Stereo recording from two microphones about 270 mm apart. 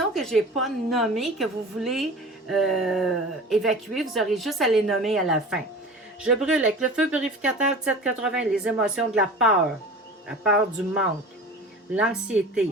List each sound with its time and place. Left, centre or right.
0.1 s speech: centre